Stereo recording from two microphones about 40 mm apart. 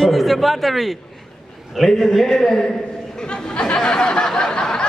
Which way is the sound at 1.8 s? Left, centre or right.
Centre.